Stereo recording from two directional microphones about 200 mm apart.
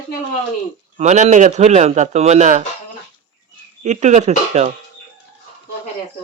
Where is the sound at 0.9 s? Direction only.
35° right (ahead or behind).